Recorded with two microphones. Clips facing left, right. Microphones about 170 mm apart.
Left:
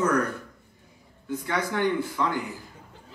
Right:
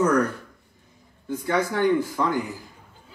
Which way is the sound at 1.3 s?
40° right (ahead or behind).